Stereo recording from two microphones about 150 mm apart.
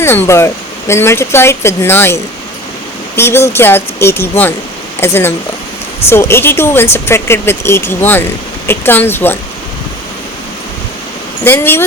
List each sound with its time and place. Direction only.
0.0 s speech: 15° left (ahead or behind)
3.2 s speech: 15° left (ahead or behind)
11.4 s speech: 15° left (ahead or behind)